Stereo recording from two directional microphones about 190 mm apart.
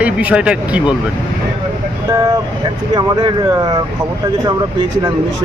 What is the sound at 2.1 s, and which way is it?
Speech, 20° right (ahead or behind).